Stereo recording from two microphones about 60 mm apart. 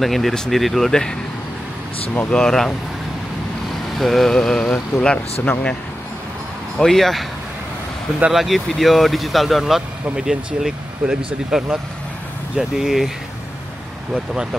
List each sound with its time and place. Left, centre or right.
0.0 s speech: centre
2.3 s vehicle: centre
4.0 s vehicle: centre
6.8 s speech: centre
8.3 s speech: centre